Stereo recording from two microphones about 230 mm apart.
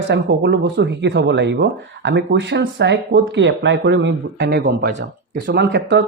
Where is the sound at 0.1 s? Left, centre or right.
Right.